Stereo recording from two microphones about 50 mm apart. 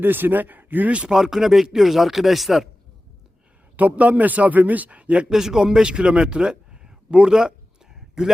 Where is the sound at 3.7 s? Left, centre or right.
Right.